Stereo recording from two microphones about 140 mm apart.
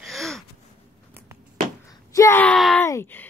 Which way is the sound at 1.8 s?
25° left (ahead or behind).